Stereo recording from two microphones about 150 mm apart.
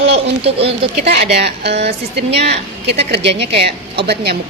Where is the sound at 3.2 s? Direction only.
40° right (ahead or behind).